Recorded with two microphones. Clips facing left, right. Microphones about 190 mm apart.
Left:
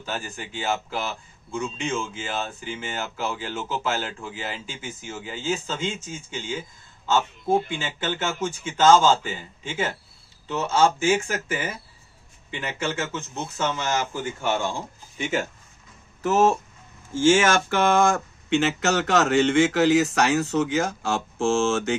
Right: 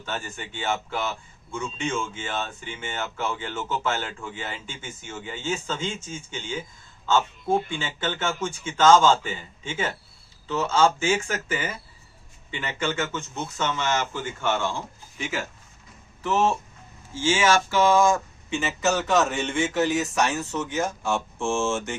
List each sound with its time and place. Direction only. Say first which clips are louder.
0.0 s speech: left 1 dB; 10° left (ahead or behind)
16.2 s speech: left 3 dB; 45° left (ahead or behind); by 21.9 s 70° left (ahead or behind)